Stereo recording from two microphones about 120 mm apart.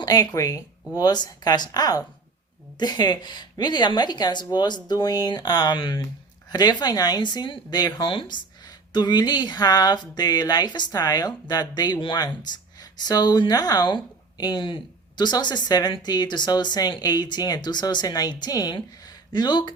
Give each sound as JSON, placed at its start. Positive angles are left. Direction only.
{"t": 0.0, "sound": "a woman's voice", "side_deg": 30}